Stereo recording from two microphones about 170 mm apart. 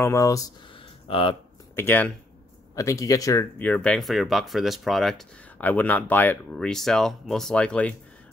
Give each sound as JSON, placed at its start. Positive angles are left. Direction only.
{"t": 0.0, "sound": "speech", "side_deg": 15}
{"t": 1.0, "sound": "speech", "side_deg": 30}
{"t": 1.8, "sound": "speech", "side_deg": 10}